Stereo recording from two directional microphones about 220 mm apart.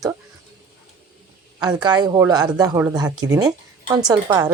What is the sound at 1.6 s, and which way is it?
Speech, 20° right (ahead or behind).